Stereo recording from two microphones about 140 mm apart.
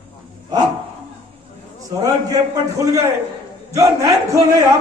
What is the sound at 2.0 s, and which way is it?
Speech, 25° right (ahead or behind).